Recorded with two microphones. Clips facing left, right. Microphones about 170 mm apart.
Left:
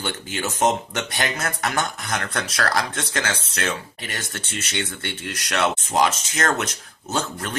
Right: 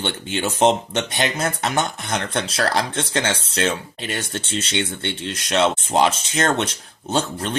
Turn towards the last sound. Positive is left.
turn(degrees=-30)  # may be behind; listen again after turning